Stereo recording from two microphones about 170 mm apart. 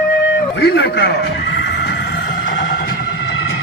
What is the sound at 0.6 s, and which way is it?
Chicken, 80° left.